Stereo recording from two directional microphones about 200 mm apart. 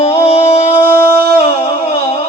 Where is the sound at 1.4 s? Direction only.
30° left (ahead or behind).